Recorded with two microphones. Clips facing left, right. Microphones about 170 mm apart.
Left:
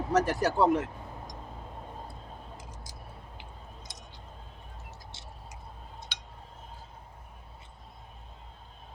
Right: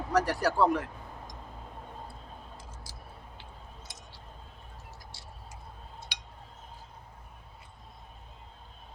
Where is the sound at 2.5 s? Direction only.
20° left (ahead or behind).